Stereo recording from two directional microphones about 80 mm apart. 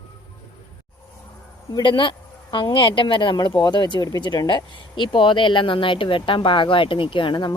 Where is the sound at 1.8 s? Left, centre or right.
Left.